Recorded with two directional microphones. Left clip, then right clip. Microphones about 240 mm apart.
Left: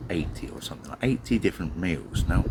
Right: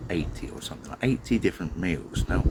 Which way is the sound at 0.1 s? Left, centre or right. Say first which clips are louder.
Even; centre.